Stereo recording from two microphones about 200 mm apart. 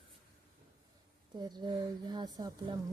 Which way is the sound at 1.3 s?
20° right (ahead or behind).